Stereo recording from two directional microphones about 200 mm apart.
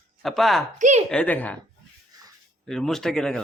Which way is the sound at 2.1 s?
20° right (ahead or behind).